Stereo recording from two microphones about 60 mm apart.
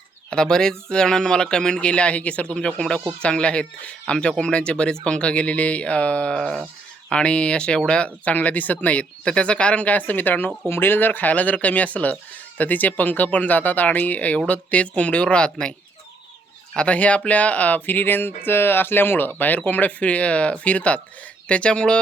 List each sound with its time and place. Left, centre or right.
0.3 s speech: centre
16.7 s speech: left